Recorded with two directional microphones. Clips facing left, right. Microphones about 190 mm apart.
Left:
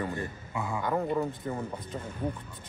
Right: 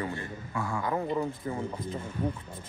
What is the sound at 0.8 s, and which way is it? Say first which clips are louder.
Speech: left 2 dB; centre (ahead or behind).